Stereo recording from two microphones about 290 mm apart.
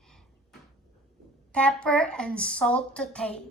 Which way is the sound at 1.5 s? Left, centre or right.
Centre.